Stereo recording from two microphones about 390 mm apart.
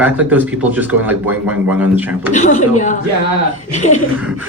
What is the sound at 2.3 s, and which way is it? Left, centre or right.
Speech, centre.